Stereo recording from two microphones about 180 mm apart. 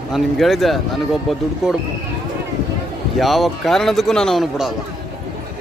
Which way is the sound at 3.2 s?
Centre (ahead or behind).